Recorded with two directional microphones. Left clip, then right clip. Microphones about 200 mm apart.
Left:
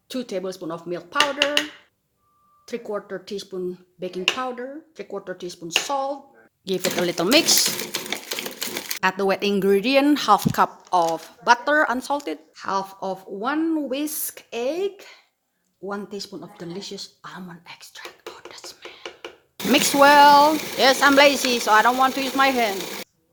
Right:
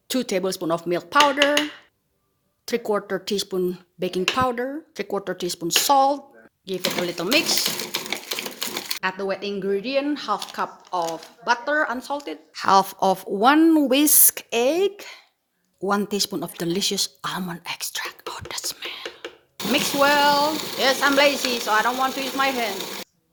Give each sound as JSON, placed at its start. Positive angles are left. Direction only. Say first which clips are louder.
{"t": 0.1, "sound": "speech", "louder": "right 5 dB", "side_deg": -35}
{"t": 2.6, "sound": "speech", "louder": "right 6 dB", "side_deg": -40}
{"t": 6.7, "sound": "speech", "louder": "left 2 dB", "side_deg": 30}
{"t": 7.6, "sound": "sewing machine", "louder": "left 1 dB", "side_deg": 5}
{"t": 9.0, "sound": "speech", "louder": "left 6 dB", "side_deg": 35}
{"t": 12.5, "sound": "speech", "louder": "right 10 dB", "side_deg": -40}
{"t": 19.0, "sound": "a sound", "louder": "right 2 dB", "side_deg": 0}
{"t": 19.7, "sound": "speech", "louder": "left 5 dB", "side_deg": 35}
{"t": 22.8, "sound": "a sound", "louder": "even", "side_deg": 0}